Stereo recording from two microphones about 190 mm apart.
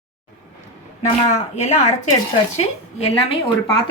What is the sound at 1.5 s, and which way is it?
Speech, 35° left (ahead or behind).